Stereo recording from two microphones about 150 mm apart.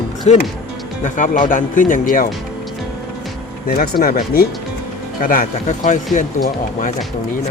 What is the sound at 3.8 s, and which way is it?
Speech, 85° left.